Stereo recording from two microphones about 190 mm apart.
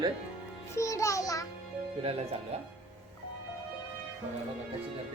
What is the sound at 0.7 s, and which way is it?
Music, 15° left (ahead or behind).